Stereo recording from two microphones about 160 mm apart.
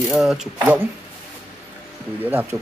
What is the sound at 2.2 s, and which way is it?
Speech, 10° right (ahead or behind).